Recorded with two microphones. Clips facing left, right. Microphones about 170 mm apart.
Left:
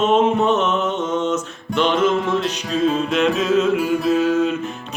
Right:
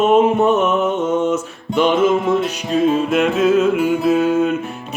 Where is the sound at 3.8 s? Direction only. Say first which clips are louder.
Right 3 dB; 55° right (ahead or behind).